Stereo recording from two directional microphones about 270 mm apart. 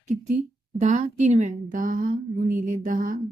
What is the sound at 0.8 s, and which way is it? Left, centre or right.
A woman's voice, right.